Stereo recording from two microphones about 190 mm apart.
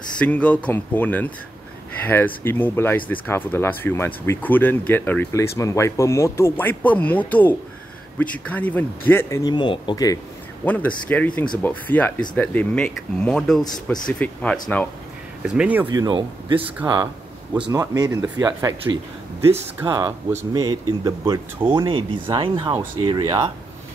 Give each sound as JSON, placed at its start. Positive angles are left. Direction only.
{"t": 0.2, "sound": "speech", "side_deg": 5}
{"t": 10.6, "sound": "speech", "side_deg": 10}
{"t": 15.4, "sound": "speech", "side_deg": -5}
{"t": 15.9, "sound": "speech", "side_deg": -25}
{"t": 17.6, "sound": "speech", "side_deg": -20}